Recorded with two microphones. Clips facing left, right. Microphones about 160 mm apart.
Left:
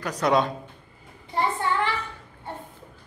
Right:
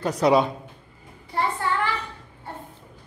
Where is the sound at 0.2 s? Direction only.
5° right (ahead or behind).